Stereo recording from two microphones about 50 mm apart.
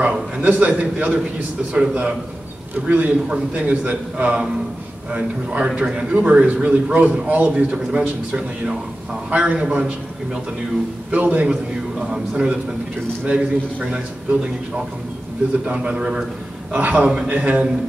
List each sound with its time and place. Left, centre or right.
0.0 s a man's voice: right
2.7 s a man's voice: right
7.5 s a man's voice: centre
11.1 s a man's voice: right
15.6 s speech: right